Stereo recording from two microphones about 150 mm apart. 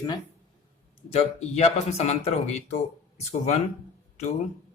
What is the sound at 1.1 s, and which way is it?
Speech, 45° left (ahead or behind).